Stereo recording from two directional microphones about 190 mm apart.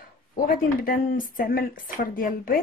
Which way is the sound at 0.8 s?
45° left (ahead or behind).